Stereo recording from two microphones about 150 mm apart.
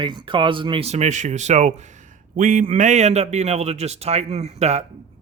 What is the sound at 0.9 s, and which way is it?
A man's voice, 50° right (ahead or behind).